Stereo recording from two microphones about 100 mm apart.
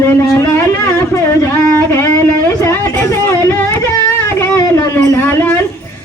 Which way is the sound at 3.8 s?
30° left (ahead or behind).